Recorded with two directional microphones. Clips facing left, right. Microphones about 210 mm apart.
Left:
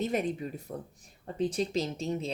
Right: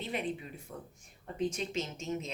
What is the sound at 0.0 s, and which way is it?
Speech, 45° left (ahead or behind).